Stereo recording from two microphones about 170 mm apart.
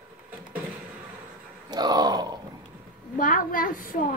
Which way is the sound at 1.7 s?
25° right (ahead or behind).